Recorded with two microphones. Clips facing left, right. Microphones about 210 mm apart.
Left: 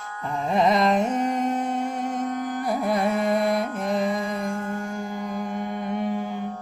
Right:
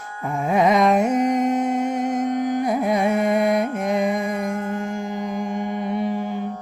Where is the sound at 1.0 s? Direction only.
10° right (ahead or behind).